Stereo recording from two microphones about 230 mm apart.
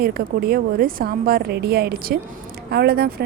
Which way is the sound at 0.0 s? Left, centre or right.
Right.